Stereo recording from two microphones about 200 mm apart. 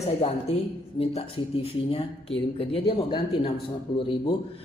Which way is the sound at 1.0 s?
30° left (ahead or behind).